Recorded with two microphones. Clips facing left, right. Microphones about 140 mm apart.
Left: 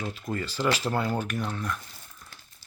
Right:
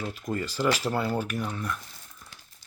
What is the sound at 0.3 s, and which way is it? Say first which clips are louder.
Speech: right 1 dB; 10° right (ahead or behind).